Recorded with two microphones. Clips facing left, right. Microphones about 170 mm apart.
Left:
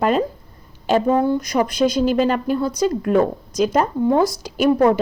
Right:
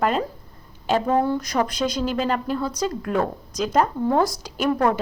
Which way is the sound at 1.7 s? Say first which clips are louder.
Left 7 dB; 5° left (ahead or behind).